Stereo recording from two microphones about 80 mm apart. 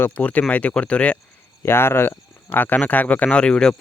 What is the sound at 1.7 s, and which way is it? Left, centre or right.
Speech, left.